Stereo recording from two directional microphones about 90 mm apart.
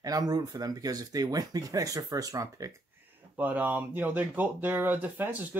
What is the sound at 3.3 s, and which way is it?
Speech, 20° right (ahead or behind).